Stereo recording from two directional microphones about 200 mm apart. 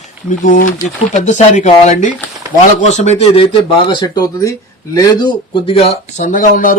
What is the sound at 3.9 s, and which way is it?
Speech, 20° left (ahead or behind).